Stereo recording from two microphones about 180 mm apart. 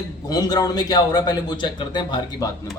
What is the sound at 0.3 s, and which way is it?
A man's voice, 20° left (ahead or behind).